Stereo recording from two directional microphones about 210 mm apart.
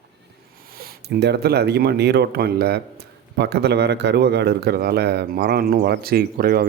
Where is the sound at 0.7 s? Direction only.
45° right (ahead or behind).